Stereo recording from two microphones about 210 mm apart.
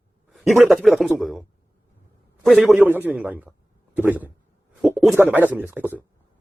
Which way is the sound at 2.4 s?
Centre (ahead or behind).